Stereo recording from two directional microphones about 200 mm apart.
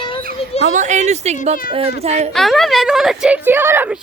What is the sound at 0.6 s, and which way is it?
Speech, 40° right (ahead or behind).